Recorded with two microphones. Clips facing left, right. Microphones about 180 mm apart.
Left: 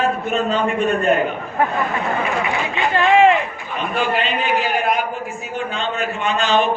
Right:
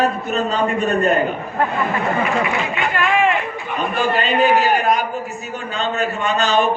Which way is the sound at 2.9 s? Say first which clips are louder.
Left 6 dB; 30° left (ahead or behind).